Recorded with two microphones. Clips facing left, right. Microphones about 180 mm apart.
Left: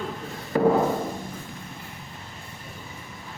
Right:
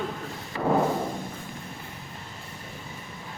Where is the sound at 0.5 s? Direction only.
45° left (ahead or behind).